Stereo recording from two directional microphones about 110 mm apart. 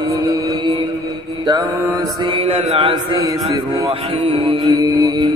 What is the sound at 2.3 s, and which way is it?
Speech, 55° right (ahead or behind).